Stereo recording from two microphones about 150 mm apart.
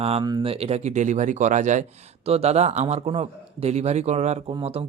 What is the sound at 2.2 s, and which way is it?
Speech, 45° right (ahead or behind).